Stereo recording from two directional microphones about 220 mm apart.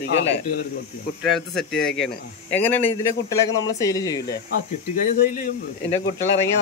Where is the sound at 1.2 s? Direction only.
Centre (ahead or behind).